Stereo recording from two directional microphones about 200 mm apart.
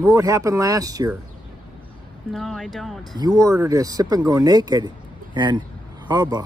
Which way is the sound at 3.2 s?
20° right (ahead or behind).